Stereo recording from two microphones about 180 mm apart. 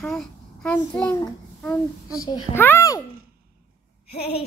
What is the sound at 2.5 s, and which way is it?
Speech, 10° left (ahead or behind).